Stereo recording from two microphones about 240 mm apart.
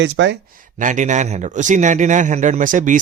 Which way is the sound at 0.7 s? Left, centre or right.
Right.